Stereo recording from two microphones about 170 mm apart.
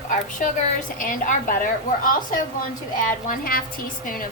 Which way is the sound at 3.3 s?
60° left (ahead or behind).